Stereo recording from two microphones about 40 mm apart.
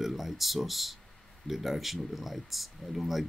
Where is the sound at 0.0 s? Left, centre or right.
Centre.